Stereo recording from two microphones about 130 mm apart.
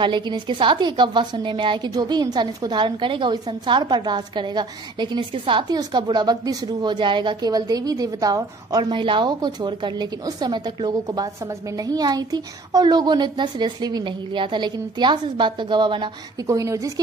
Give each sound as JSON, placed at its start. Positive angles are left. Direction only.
{"t": 0.0, "sound": "a woman's voice", "side_deg": -40}
{"t": 16.4, "sound": "speech", "side_deg": -25}